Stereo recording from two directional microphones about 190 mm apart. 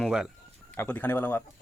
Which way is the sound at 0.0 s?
5° right (ahead or behind).